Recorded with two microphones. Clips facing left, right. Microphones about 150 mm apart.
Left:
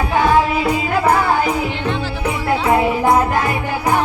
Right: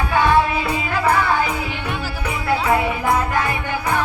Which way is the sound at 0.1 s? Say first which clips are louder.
Left 2 dB; 30° left (ahead or behind).